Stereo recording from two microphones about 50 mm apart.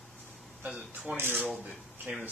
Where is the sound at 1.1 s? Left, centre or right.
Right.